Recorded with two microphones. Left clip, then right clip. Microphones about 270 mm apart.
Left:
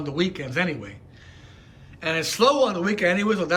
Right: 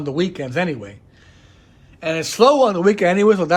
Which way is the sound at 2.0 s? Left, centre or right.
Centre.